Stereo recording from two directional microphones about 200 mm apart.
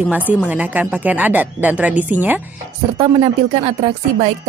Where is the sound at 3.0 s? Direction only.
25° right (ahead or behind).